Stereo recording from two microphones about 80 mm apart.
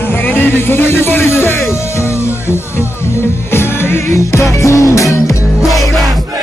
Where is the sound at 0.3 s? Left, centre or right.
Left.